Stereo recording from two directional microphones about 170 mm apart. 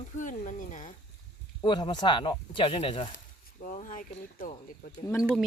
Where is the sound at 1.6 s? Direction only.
25° left (ahead or behind).